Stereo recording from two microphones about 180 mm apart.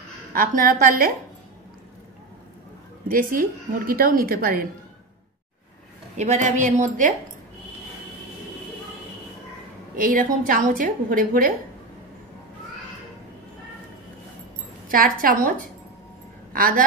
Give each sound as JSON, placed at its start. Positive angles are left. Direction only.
{"t": 0.3, "sound": "a woman's voice", "side_deg": -50}
{"t": 3.1, "sound": "a woman's voice", "side_deg": -50}
{"t": 6.1, "sound": "a woman's voice", "side_deg": -40}
{"t": 9.9, "sound": "a woman's voice", "side_deg": -50}
{"t": 14.9, "sound": "a woman's voice", "side_deg": -50}
{"t": 16.5, "sound": "a woman's voice", "side_deg": -50}